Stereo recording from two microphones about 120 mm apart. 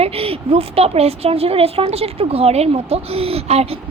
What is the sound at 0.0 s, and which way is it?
A woman's voice, 55° right (ahead or behind).